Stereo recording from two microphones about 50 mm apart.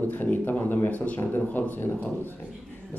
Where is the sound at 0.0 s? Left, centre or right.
Left.